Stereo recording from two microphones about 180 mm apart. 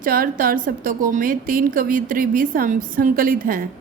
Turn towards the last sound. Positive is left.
turn(degrees=-50)  # may be behind; listen again after turning